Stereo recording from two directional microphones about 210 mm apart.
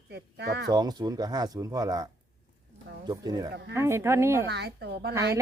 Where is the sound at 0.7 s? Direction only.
20° right (ahead or behind).